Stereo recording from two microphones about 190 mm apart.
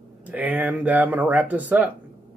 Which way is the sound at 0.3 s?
10° right (ahead or behind).